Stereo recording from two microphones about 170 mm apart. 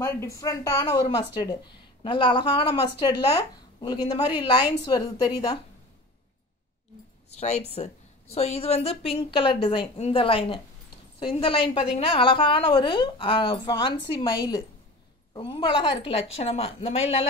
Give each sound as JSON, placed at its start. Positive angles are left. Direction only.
{"t": 0.0, "sound": "a woman's voice", "side_deg": 15}
{"t": 7.3, "sound": "a woman's voice", "side_deg": 40}